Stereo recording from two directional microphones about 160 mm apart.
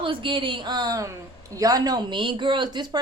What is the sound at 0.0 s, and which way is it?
A man's voice, 30° right (ahead or behind).